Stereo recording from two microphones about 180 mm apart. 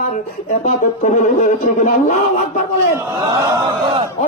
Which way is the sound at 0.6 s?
45° left (ahead or behind).